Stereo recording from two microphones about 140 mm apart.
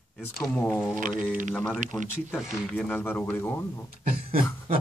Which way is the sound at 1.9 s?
15° left (ahead or behind).